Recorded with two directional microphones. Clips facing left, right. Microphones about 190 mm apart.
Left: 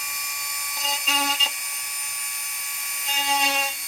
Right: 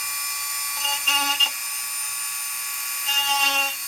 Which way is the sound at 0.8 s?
Centre (ahead or behind).